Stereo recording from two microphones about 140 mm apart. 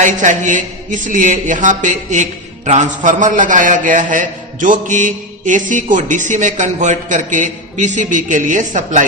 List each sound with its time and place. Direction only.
0.0 s a man's voice: 65° right (ahead or behind)